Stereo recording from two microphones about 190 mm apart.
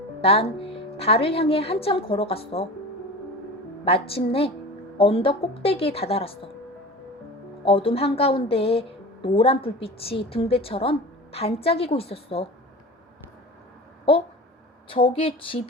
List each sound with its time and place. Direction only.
0.2 s a woman's voice: 30° left (ahead or behind)
3.8 s a woman's voice: 30° left (ahead or behind)
7.6 s a woman's voice: 30° left (ahead or behind)
14.8 s speech: 30° left (ahead or behind)